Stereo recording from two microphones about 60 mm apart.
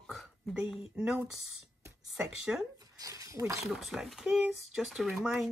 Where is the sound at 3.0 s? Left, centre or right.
Right.